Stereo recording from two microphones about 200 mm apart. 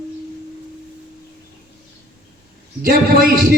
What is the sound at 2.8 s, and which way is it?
Speech, 45° right (ahead or behind).